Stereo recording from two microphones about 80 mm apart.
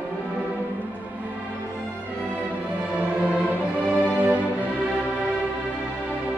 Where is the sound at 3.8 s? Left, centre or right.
Centre.